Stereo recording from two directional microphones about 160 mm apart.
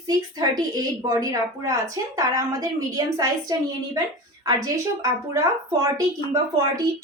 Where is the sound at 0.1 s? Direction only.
25° right (ahead or behind).